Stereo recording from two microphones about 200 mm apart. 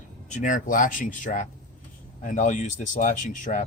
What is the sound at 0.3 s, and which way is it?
Speech, 40° left (ahead or behind).